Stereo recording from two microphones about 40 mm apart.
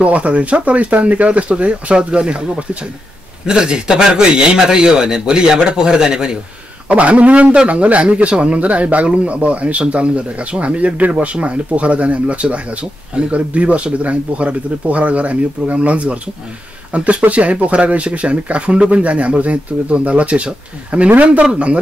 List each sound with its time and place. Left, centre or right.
0.0 s speech: right; by 6.3 s centre
6.9 s speech: right